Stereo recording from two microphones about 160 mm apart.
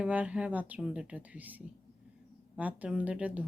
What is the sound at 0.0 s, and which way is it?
Speech, 10° right (ahead or behind).